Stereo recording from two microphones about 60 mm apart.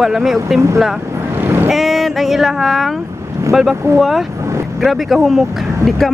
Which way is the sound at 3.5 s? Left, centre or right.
Centre.